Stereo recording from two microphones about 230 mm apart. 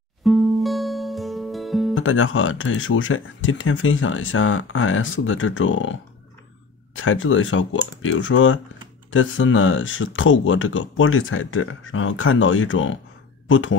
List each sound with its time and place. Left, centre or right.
0.2 s music: centre
2.0 s speech: left
7.0 s speech: left